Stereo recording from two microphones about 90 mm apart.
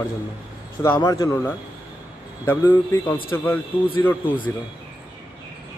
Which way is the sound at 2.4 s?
25° left (ahead or behind).